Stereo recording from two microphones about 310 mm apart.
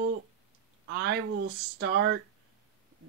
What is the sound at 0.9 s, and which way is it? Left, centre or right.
Speech, right.